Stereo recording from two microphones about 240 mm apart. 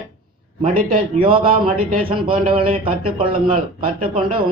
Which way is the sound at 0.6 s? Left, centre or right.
Right.